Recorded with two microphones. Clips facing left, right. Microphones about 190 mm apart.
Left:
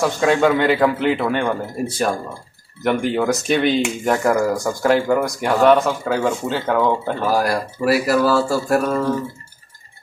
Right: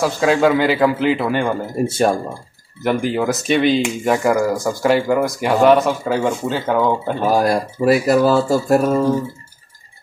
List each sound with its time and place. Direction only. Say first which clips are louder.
0.0 s speech: right 1 dB; centre (ahead or behind)
1.9 s speech: right 5 dB; 25° right (ahead or behind)
2.8 s speech: even; centre (ahead or behind)
7.2 s speech: right 3 dB; 20° right (ahead or behind)